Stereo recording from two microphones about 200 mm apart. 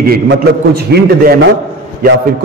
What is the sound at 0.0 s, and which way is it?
A man's voice, 55° right (ahead or behind).